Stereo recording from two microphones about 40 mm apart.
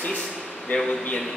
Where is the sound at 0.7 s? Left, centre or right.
Left.